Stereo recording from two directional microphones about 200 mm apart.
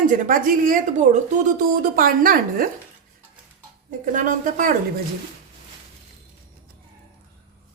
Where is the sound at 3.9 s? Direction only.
40° right (ahead or behind).